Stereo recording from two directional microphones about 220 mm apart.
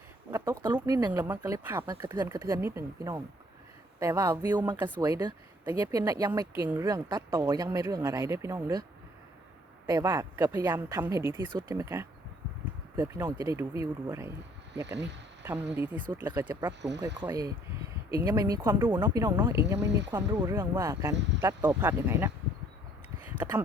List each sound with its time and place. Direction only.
0.3 s speech: 15° right (ahead or behind)
9.8 s speech: 15° right (ahead or behind)
15.4 s speech: 10° right (ahead or behind)